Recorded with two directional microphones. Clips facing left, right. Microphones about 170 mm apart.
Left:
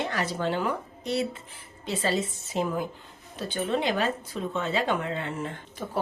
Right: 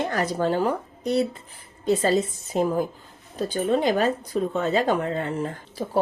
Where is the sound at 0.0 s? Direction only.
45° right (ahead or behind).